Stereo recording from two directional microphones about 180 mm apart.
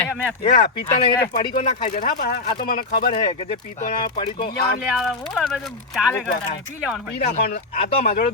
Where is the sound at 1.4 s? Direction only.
30° left (ahead or behind).